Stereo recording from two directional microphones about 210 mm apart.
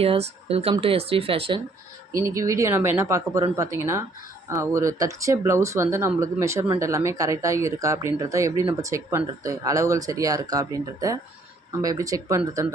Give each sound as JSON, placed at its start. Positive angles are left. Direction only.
{"t": 0.0, "sound": "speech", "side_deg": -30}
{"t": 2.1, "sound": "speech", "side_deg": -15}